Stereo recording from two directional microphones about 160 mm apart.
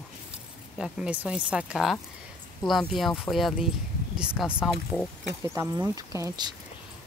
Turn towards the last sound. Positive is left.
turn(degrees=-25)  # may be behind; listen again after turning